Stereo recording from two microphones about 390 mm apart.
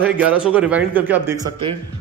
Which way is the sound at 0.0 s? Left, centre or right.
Centre.